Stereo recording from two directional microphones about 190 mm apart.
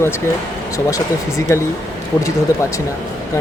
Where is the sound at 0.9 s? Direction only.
15° left (ahead or behind).